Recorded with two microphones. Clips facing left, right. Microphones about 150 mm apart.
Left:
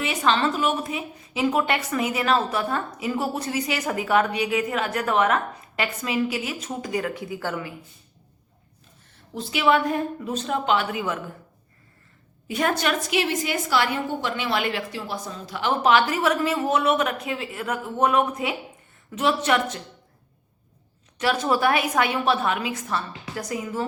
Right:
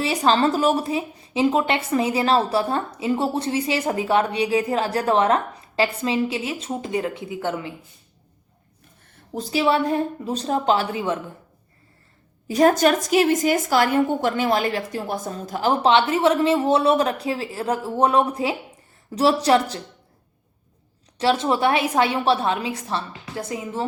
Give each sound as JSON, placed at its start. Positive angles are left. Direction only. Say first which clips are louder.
{"t": 0.0, "sound": "a woman's voice", "louder": "right 4 dB", "side_deg": -35}
{"t": 9.3, "sound": "a woman's voice", "louder": "right 1 dB", "side_deg": -40}
{"t": 12.5, "sound": "a woman's voice", "louder": "right 7 dB", "side_deg": -35}
{"t": 15.8, "sound": "a woman's voice", "louder": "right 2 dB", "side_deg": -25}
{"t": 21.2, "sound": "a woman's voice", "louder": "right 3 dB", "side_deg": -25}